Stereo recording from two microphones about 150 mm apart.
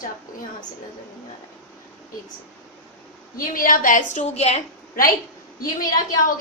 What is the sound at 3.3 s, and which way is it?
A woman's voice, 70° left (ahead or behind).